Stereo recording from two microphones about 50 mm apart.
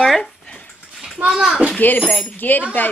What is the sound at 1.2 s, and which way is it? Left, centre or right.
Speech, centre.